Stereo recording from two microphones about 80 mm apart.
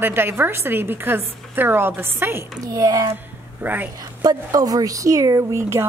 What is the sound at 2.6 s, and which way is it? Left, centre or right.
Speech, right.